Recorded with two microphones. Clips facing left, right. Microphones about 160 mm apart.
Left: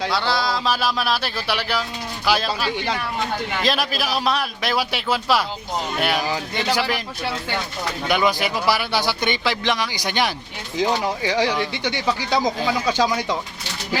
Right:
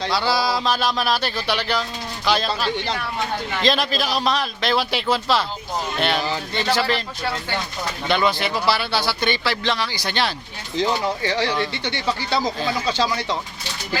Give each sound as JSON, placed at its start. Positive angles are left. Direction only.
{"t": 0.1, "sound": "a man's voice", "side_deg": -5}
{"t": 8.0, "sound": "speech", "side_deg": 10}